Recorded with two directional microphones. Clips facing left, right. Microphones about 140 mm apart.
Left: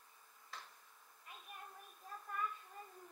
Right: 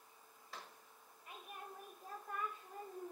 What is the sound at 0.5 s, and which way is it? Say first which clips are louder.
Tick-tock: right 1 dB; 10° right (ahead or behind).